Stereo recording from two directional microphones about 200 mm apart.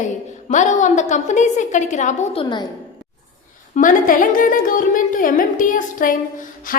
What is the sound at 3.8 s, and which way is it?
A woman's voice, 40° left (ahead or behind).